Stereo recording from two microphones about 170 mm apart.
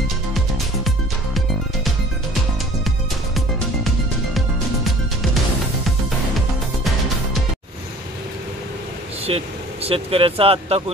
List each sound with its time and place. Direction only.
3.3 s music: centre (ahead or behind)
9.2 s speech: 35° right (ahead or behind)